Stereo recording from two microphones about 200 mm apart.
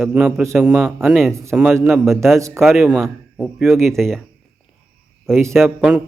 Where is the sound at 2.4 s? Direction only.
15° right (ahead or behind).